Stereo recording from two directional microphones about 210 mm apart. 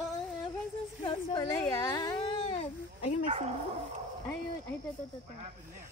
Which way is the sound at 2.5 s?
30° left (ahead or behind).